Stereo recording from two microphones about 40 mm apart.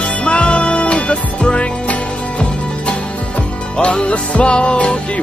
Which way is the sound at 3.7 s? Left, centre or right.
Left.